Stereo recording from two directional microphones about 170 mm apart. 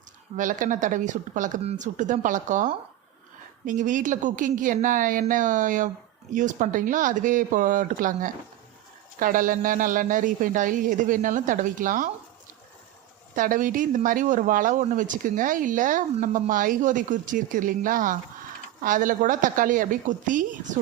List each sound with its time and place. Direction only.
0.3 s speech: 50° right (ahead or behind)
13.3 s speech: 50° right (ahead or behind)